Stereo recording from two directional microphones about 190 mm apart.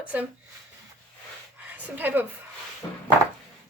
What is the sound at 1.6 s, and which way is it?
Speech, 10° right (ahead or behind).